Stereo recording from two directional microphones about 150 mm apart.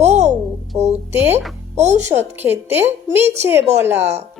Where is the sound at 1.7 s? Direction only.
50° right (ahead or behind).